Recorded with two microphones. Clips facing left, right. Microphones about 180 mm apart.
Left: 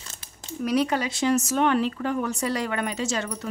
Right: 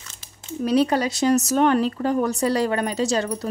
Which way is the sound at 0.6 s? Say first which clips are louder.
Right 4 dB; 30° right (ahead or behind).